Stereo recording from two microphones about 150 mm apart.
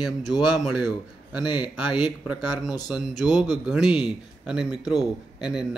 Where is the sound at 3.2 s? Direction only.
Centre (ahead or behind).